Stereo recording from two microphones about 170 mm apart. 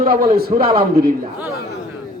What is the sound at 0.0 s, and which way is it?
A man's voice, 60° right (ahead or behind).